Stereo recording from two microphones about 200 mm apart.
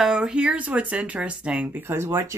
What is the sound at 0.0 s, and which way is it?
Speech, 5° right (ahead or behind).